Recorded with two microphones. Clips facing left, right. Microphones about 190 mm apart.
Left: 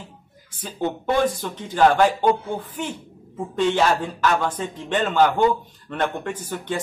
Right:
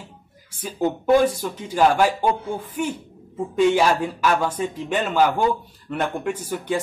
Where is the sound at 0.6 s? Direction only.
10° right (ahead or behind).